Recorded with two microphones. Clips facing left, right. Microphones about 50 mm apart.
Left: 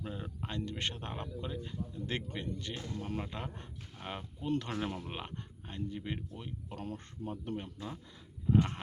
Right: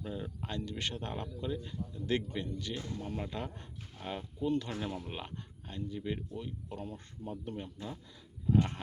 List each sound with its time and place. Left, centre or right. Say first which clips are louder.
0.0 s speech: right 1 dB; left
0.6 s speech: left 1 dB; left
3.2 s speech: right 1 dB; left
4.4 s speech: right 1 dB; left
6.9 s speech: left 1 dB; left
7.5 s speech: left 1 dB; left